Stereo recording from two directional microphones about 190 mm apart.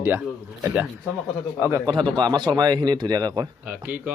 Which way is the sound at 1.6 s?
20° right (ahead or behind).